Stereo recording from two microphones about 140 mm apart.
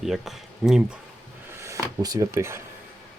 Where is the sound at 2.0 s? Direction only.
25° right (ahead or behind).